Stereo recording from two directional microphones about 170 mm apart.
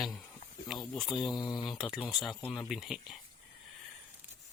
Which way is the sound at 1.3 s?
25° left (ahead or behind).